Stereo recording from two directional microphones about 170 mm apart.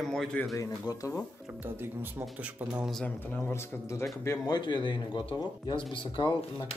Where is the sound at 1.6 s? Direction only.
15° right (ahead or behind).